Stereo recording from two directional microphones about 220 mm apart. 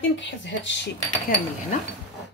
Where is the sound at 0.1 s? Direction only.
55° left (ahead or behind).